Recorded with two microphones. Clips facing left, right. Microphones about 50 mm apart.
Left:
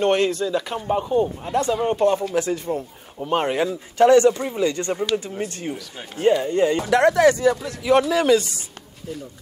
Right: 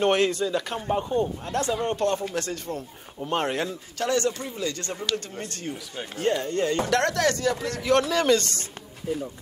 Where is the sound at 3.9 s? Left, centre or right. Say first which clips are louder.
Left 12 dB; left; by 8.7 s centre.